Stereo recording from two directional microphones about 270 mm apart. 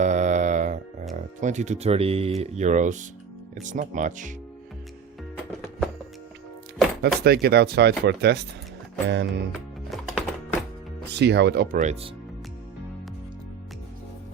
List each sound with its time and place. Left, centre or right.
0.0 s mantra: right
1.1 s speech: right
7.0 s speech: right
9.5 s music: centre
11.1 s speech: right